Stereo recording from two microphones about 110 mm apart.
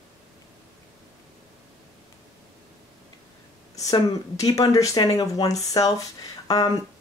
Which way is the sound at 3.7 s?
35° left (ahead or behind).